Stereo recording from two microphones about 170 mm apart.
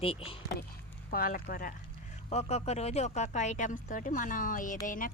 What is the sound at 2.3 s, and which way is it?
A woman's voice, 40° left (ahead or behind).